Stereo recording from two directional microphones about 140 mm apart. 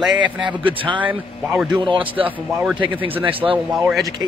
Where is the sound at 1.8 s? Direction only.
35° right (ahead or behind).